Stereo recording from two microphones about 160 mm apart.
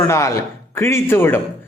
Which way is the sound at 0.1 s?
20° left (ahead or behind).